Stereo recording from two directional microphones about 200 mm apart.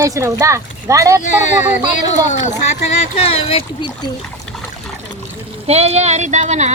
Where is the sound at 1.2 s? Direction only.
35° left (ahead or behind).